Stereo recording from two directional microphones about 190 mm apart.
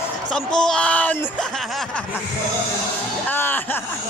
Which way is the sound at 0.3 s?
5° left (ahead or behind).